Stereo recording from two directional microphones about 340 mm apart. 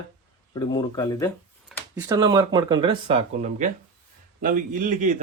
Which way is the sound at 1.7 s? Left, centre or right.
Centre.